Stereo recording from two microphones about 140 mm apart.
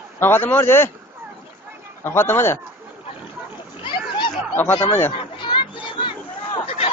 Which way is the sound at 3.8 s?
35° left (ahead or behind).